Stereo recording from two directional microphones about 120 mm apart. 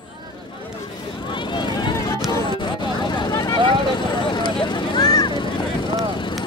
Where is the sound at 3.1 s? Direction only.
35° left (ahead or behind).